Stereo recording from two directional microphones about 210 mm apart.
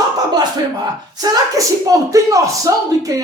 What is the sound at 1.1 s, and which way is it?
Speech, 15° right (ahead or behind).